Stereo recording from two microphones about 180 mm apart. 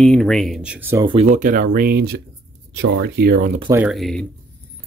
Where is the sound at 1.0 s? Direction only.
30° right (ahead or behind).